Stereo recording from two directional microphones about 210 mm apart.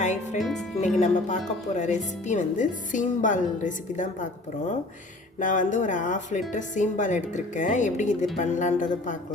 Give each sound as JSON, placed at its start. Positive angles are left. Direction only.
{"t": 0.0, "sound": "music", "side_deg": 35}
{"t": 0.3, "sound": "speech", "side_deg": 0}
{"t": 0.9, "sound": "speech", "side_deg": 35}
{"t": 5.4, "sound": "speech", "side_deg": 35}